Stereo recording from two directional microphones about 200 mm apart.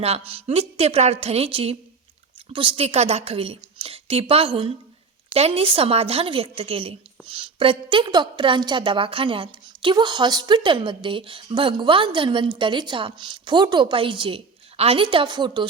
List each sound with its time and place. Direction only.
0.0 s a woman's voice: 30° right (ahead or behind)